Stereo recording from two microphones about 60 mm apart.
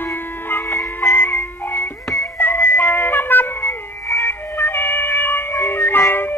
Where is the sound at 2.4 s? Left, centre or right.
Left.